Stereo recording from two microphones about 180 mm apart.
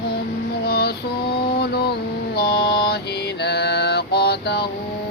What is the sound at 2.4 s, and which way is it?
Mantra, 60° left (ahead or behind).